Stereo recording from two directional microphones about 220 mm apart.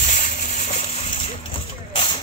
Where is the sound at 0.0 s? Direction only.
35° left (ahead or behind).